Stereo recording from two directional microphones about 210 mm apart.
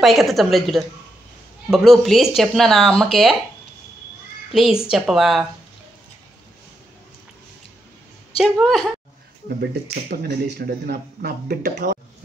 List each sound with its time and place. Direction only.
0.0 s speech: centre (ahead or behind)
4.5 s speech: centre (ahead or behind)
8.4 s speech: centre (ahead or behind)
9.6 s speech: 50° right (ahead or behind)